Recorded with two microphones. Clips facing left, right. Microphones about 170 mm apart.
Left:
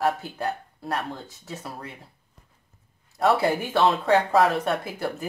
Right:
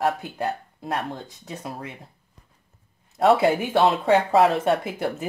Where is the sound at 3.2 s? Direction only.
20° right (ahead or behind).